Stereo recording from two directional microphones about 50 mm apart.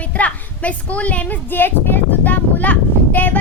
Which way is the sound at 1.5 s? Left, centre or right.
Left.